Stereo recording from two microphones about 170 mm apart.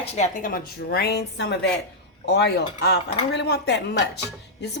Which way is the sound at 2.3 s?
80° left.